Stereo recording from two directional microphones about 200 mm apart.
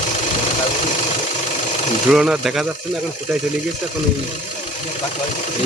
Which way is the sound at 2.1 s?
5° right (ahead or behind).